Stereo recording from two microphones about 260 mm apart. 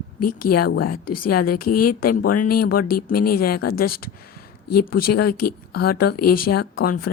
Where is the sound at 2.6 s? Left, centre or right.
Left.